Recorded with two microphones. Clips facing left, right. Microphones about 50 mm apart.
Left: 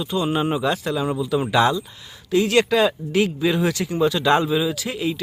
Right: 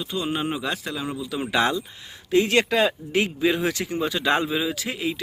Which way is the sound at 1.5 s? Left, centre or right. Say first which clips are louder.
Left 2 dB; right.